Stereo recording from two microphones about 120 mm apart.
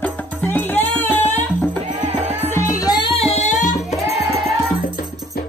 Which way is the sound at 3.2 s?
60° left (ahead or behind).